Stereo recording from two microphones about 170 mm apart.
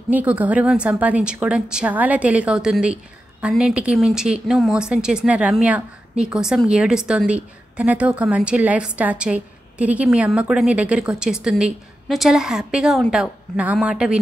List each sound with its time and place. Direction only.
0.1 s a woman's voice: 10° right (ahead or behind)